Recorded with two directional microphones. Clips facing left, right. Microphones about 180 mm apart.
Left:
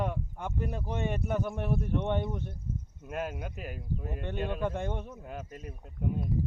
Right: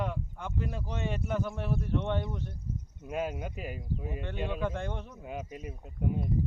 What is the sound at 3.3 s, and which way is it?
Speech, 10° right (ahead or behind).